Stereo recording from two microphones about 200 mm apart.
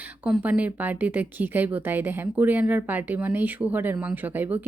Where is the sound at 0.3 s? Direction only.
5° right (ahead or behind).